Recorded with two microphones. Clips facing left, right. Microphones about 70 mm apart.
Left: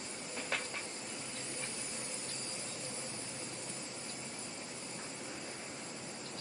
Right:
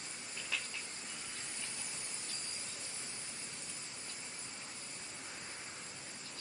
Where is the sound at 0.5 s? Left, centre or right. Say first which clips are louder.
Left 3 dB; left.